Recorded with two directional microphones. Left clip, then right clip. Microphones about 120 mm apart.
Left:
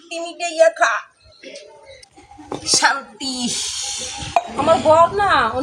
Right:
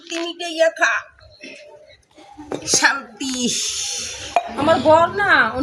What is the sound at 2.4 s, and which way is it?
Speech, 20° right (ahead or behind).